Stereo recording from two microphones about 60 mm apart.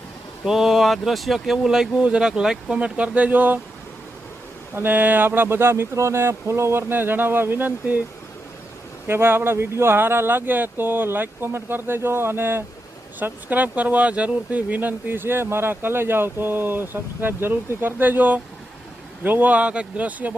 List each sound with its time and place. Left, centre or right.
0.4 s speech: centre; by 3.6 s right
4.7 s speech: right
9.0 s speech: right
13.1 s speech: right